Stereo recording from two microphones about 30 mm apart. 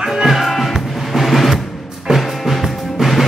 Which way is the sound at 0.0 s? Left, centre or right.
Centre.